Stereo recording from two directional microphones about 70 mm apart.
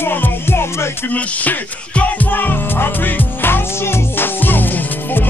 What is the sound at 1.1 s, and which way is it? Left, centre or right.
Music, left.